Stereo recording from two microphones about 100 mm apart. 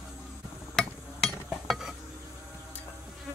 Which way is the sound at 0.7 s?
5° left (ahead or behind).